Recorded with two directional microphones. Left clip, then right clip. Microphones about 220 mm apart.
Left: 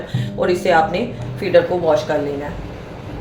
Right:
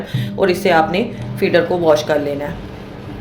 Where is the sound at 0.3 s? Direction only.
50° right (ahead or behind).